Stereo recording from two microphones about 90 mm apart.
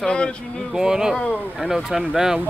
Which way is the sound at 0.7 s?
5° right (ahead or behind).